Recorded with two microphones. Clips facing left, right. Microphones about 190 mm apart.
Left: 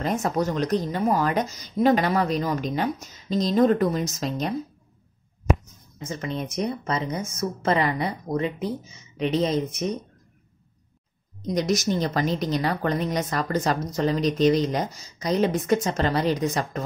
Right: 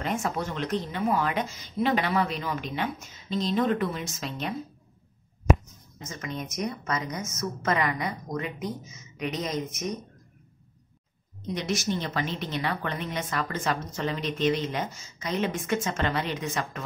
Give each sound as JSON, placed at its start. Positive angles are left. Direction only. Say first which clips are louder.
{"t": 0.0, "sound": "speech", "louder": "left 5 dB", "side_deg": 40}
{"t": 6.0, "sound": "speech", "louder": "left 6 dB", "side_deg": 30}
{"t": 11.4, "sound": "speech", "louder": "left 6 dB", "side_deg": 40}